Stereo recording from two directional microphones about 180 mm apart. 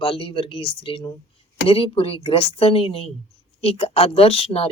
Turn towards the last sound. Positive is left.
turn(degrees=35)  # may be behind; listen again after turning